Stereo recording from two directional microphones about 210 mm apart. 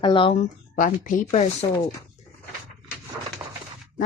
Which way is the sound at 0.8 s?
40° left (ahead or behind).